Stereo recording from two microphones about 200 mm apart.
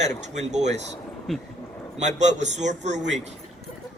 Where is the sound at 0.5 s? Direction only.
35° right (ahead or behind).